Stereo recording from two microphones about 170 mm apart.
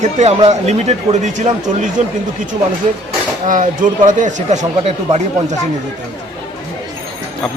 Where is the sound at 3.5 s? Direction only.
50° right (ahead or behind).